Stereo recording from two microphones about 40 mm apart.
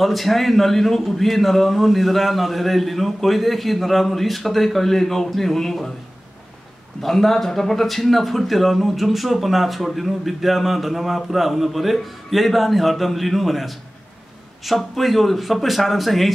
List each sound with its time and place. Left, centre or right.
0.0 s speech: centre
7.0 s speech: centre